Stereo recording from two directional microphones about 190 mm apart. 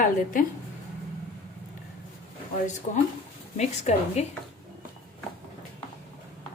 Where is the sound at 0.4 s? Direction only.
45° left (ahead or behind).